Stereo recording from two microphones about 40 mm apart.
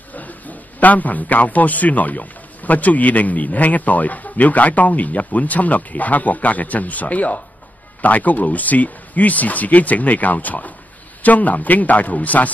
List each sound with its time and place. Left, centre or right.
0.1 s a man's voice: left